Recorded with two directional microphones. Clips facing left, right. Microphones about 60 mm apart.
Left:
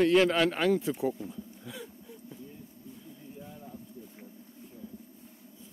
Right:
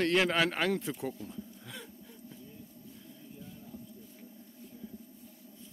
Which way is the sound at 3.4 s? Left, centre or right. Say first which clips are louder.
Left 1 dB; left.